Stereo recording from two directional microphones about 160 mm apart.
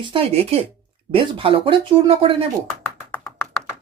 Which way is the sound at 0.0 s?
35° right (ahead or behind).